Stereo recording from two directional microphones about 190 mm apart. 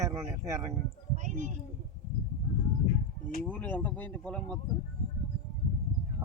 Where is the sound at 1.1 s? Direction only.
40° right (ahead or behind).